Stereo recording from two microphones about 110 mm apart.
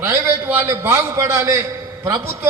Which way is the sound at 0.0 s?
25° right (ahead or behind).